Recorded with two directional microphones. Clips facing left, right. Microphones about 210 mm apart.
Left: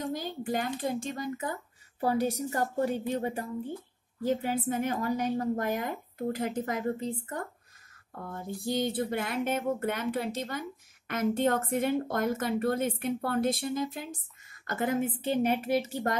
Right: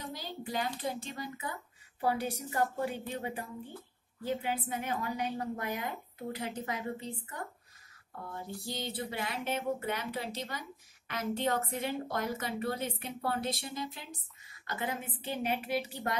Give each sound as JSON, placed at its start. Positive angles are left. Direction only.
{"t": 0.0, "sound": "a child's voice", "side_deg": 50}
{"t": 8.6, "sound": "a child's voice", "side_deg": 50}